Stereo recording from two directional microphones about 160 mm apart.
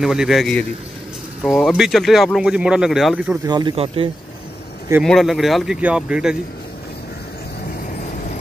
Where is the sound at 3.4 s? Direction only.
25° right (ahead or behind).